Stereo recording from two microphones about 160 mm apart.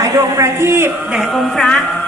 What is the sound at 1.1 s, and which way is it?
Speech, centre (ahead or behind).